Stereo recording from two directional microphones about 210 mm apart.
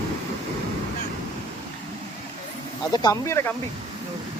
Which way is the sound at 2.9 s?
15° left (ahead or behind).